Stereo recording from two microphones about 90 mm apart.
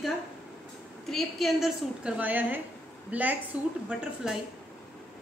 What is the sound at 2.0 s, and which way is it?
A woman's voice, 20° right (ahead or behind).